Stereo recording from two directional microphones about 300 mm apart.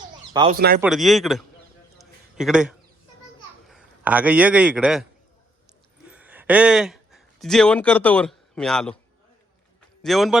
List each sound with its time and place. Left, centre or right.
0.4 s speech: centre
0.8 s a man's voice: centre
6.1 s speech: centre
10.0 s speech: centre